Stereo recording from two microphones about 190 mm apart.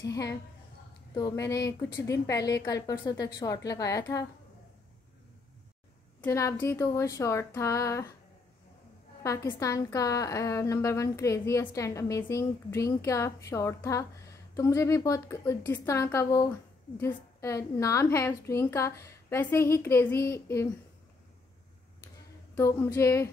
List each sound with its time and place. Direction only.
0.0 s a woman's voice: 20° left (ahead or behind)
6.2 s a woman's voice: 15° left (ahead or behind)
9.2 s a woman's voice: 15° left (ahead or behind)
22.6 s a woman's voice: 15° left (ahead or behind)